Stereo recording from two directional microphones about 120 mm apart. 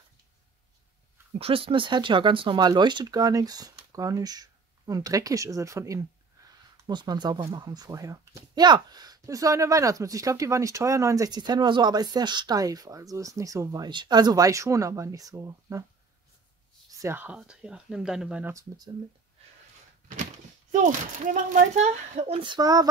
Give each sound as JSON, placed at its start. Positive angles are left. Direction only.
{"t": 1.4, "sound": "speech", "side_deg": -50}
{"t": 6.9, "sound": "speech", "side_deg": -40}
{"t": 13.8, "sound": "speech", "side_deg": -40}
{"t": 16.9, "sound": "a sound", "side_deg": -25}
{"t": 17.2, "sound": "speech", "side_deg": -10}
{"t": 18.4, "sound": "speech", "side_deg": -25}
{"t": 20.7, "sound": "speech", "side_deg": -90}
{"t": 21.8, "sound": "speech", "side_deg": -75}
{"t": 22.4, "sound": "speech", "side_deg": -35}